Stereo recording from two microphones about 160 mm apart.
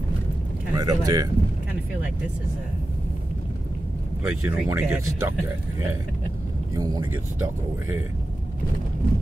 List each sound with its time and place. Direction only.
0.7 s speech: 25° right (ahead or behind)
4.2 s speech: 10° right (ahead or behind)
6.7 s speech: 25° right (ahead or behind)